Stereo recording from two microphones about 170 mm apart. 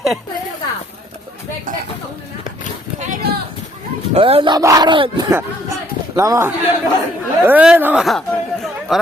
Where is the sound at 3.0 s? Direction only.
60° right (ahead or behind).